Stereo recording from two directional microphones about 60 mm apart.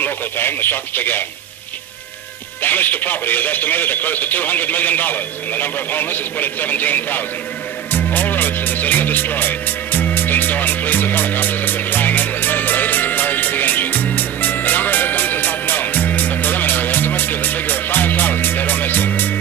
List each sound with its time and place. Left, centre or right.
0.0 s speech: left
2.6 s speech: left
7.9 s music: left